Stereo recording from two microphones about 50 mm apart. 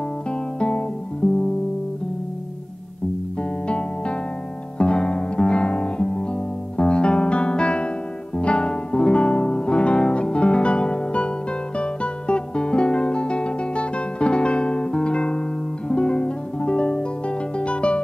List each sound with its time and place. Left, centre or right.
0.3 s music: centre
3.6 s music: left
4.7 s guitar: centre
6.8 s music: centre